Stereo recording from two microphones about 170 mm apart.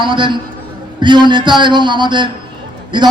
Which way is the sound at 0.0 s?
30° right (ahead or behind).